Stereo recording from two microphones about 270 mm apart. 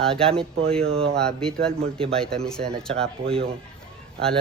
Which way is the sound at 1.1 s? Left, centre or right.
Centre.